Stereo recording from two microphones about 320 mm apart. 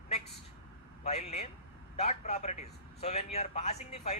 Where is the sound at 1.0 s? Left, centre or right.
Centre.